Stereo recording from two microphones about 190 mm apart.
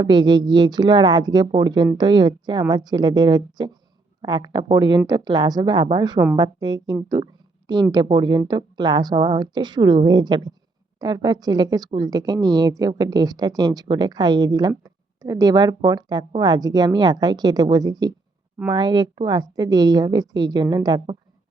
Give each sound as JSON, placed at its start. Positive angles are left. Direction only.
{"t": 0.0, "sound": "a woman's voice", "side_deg": -20}